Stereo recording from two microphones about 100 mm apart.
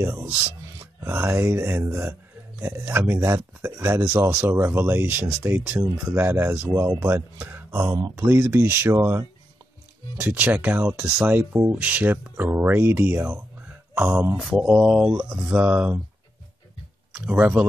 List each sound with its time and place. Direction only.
0.0 s speech: 25° right (ahead or behind)
5.6 s speech: 15° right (ahead or behind)
14.3 s mantra: 5° right (ahead or behind)
14.6 s speech: 15° right (ahead or behind)
17.1 s speech: 15° right (ahead or behind)